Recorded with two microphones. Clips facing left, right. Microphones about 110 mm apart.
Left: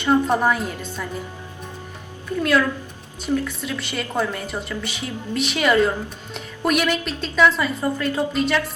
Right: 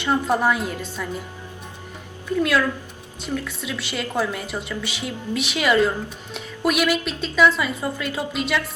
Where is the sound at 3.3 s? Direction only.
Centre (ahead or behind).